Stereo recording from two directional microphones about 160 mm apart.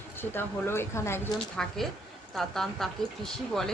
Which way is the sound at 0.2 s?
15° left (ahead or behind).